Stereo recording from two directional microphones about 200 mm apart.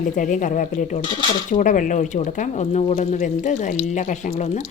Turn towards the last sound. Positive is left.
turn(degrees=35)  # may be behind; listen again after turning